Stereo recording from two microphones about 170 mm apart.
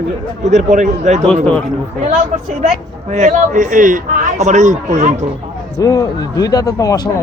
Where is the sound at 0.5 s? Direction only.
45° right (ahead or behind).